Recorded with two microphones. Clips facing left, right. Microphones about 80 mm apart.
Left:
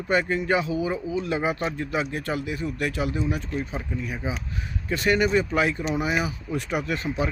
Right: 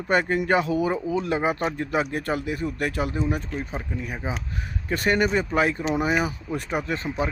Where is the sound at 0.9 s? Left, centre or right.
Right.